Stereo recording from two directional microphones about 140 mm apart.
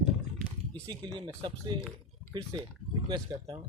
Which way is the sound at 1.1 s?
35° right (ahead or behind).